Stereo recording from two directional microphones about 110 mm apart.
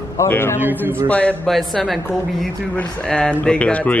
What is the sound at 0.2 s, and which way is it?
Speech, 20° left (ahead or behind).